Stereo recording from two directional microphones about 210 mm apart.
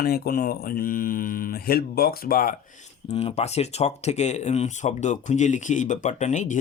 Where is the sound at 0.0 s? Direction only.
45° left (ahead or behind).